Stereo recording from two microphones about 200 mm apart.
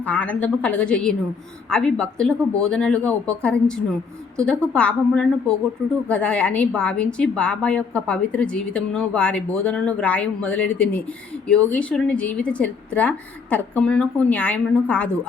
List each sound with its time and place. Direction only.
0.0 s a woman's voice: 10° left (ahead or behind)